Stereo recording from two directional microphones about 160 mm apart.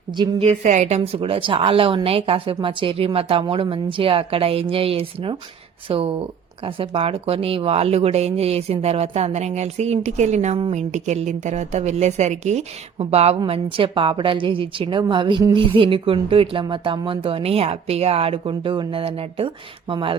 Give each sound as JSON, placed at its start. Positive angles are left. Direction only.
{"t": 0.2, "sound": "a woman's voice", "side_deg": -40}